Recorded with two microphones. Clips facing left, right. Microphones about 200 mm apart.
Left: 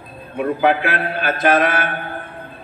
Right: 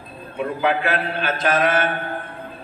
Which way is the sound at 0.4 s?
60° left (ahead or behind).